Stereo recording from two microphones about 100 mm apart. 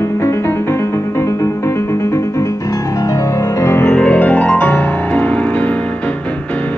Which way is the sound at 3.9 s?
10° left (ahead or behind).